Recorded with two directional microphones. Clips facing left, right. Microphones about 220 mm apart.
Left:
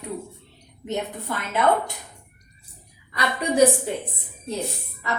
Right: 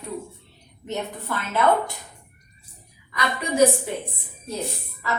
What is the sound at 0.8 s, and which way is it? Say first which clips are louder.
Speech: left 1 dB; 15° left (ahead or behind).